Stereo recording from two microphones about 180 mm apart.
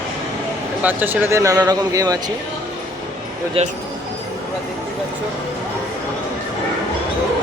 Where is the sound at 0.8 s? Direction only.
10° right (ahead or behind).